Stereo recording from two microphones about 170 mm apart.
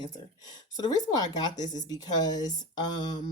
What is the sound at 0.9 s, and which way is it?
Speech, 25° left (ahead or behind).